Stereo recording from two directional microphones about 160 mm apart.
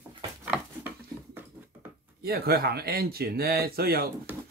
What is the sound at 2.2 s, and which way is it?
Speech, 75° right (ahead or behind).